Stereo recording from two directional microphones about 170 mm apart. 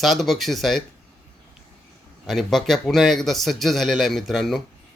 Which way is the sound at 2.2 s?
Centre (ahead or behind).